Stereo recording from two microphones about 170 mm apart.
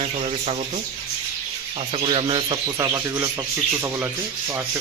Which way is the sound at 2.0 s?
30° right (ahead or behind).